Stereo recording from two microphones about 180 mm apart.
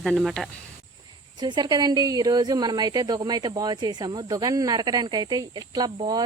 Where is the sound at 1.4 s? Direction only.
25° right (ahead or behind).